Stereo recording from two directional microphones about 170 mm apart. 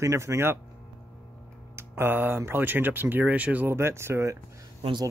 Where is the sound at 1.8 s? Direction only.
15° right (ahead or behind).